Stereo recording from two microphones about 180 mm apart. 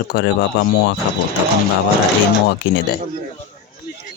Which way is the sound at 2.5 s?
80° left.